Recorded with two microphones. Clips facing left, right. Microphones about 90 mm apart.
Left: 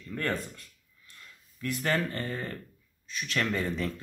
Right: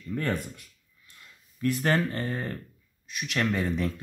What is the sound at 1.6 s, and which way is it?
Speech, 25° right (ahead or behind).